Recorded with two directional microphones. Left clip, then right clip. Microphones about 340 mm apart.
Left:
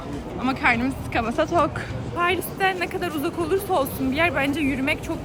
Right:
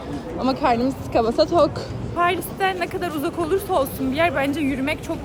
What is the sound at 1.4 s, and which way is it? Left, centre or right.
Speech, centre.